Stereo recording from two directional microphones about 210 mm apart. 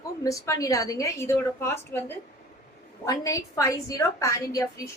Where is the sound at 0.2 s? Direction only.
15° left (ahead or behind).